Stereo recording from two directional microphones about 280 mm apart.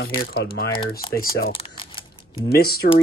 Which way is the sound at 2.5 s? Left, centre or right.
Left.